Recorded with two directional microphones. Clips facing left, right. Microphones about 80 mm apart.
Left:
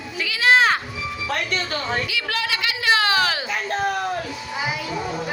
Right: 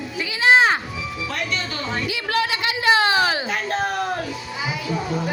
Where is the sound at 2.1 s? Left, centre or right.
Right.